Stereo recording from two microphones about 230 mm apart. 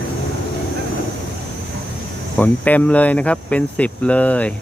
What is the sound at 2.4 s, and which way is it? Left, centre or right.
Speech, centre.